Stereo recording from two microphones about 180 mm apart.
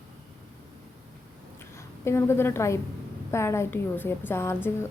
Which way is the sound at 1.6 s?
15° left (ahead or behind).